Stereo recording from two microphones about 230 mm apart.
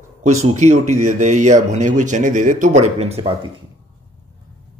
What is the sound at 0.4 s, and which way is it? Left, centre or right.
Speech, right.